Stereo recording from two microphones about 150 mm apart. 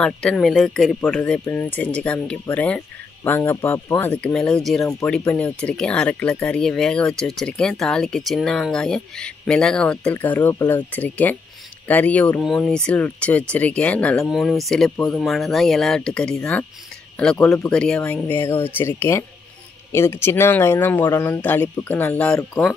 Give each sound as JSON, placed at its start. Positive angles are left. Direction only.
{"t": 0.0, "sound": "speech", "side_deg": 5}
{"t": 17.5, "sound": "speech", "side_deg": 5}